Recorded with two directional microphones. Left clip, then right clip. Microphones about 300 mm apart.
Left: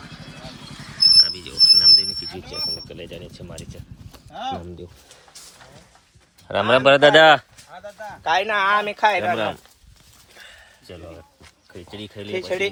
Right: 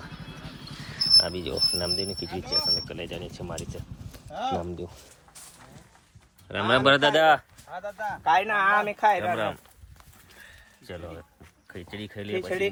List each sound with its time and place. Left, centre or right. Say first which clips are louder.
0.9 s speech: left 7 dB; centre
6.5 s speech: left 6 dB; centre
7.0 s speech: left 8 dB; left
7.7 s a sound: right 3 dB; right
8.2 s speech: left 3 dB; left
11.7 s speech: left 2 dB; centre